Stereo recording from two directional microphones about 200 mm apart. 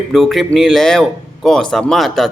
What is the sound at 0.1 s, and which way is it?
Speech, centre (ahead or behind).